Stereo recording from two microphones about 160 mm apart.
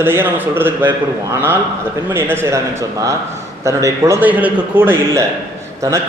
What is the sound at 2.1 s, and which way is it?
A man's voice, 15° right (ahead or behind).